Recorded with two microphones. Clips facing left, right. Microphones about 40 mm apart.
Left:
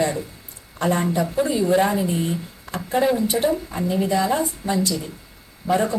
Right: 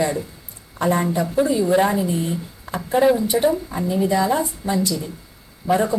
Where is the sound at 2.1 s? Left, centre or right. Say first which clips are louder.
Even; centre.